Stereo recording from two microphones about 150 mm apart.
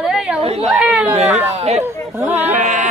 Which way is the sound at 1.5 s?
45° right (ahead or behind).